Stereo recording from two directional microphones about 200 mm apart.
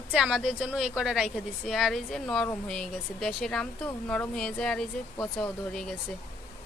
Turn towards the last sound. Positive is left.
turn(degrees=5)  # may be behind; listen again after turning